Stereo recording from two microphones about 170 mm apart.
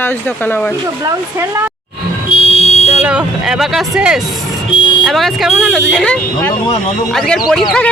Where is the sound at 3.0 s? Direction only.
5° right (ahead or behind).